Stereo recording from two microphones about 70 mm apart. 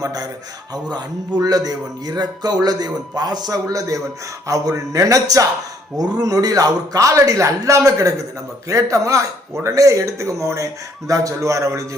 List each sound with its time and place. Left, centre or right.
0.0 s a man's voice: right
0.7 s a man's voice: right
4.4 s music: right
6.0 s a man's voice: right
8.7 s music: right